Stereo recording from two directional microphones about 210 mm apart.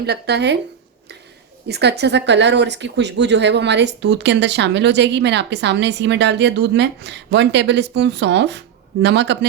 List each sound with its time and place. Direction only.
0.0 s speech: 50° right (ahead or behind)
1.6 s speech: 50° right (ahead or behind)